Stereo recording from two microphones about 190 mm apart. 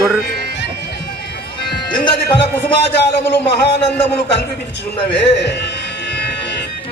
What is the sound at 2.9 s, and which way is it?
A man's voice, 60° left (ahead or behind).